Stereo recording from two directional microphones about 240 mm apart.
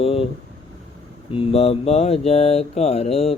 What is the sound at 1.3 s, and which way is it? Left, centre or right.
Mantra, left.